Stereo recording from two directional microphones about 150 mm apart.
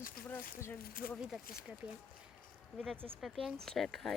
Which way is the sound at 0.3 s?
10° left (ahead or behind).